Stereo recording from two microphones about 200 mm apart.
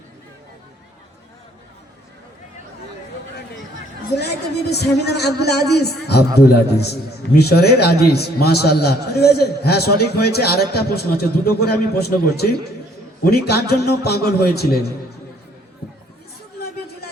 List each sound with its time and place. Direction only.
4.1 s a man's voice: 55° left (ahead or behind)